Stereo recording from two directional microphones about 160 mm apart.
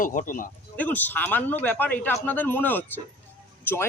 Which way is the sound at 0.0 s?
55° left (ahead or behind).